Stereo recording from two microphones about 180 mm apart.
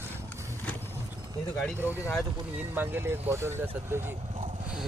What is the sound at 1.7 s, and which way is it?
Speech, 10° right (ahead or behind).